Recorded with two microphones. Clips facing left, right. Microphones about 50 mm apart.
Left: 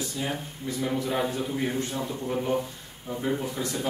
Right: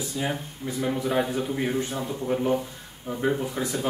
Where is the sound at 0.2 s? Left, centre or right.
Centre.